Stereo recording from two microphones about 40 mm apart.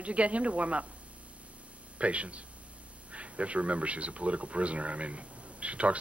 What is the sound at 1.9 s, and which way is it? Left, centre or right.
Speech, right.